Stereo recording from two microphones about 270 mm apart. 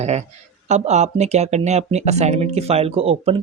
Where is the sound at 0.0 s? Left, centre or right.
Right.